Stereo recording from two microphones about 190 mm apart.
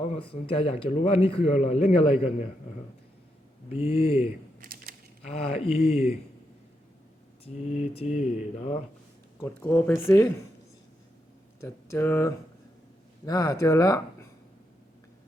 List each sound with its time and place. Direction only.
0.5 s a man's voice: 30° left (ahead or behind)
3.7 s speech: 30° left (ahead or behind)
4.6 s typewriter: 50° right (ahead or behind)
5.2 s a man's voice: 30° left (ahead or behind)
7.4 s a man's voice: 35° left (ahead or behind)
9.4 s speech: 10° left (ahead or behind)
11.6 s speech: 15° left (ahead or behind)